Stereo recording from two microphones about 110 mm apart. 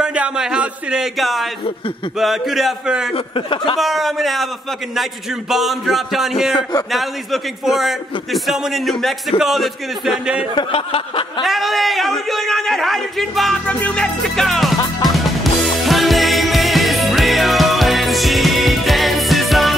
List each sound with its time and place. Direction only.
0.0 s a sound: 10° right (ahead or behind)
2.1 s a man's voice: centre (ahead or behind)
3.3 s a sound: 50° left (ahead or behind)
3.7 s a man's voice: centre (ahead or behind)
5.5 s a man's voice: centre (ahead or behind)
7.6 s a man's voice: centre (ahead or behind)
10.5 s a sound: 55° left (ahead or behind)
11.4 s a man's voice: centre (ahead or behind)
13.7 s a man's voice: 15° left (ahead or behind)
15.0 s music: centre (ahead or behind)